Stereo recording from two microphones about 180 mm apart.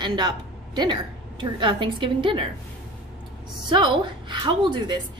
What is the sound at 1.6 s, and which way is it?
Speech, 25° right (ahead or behind).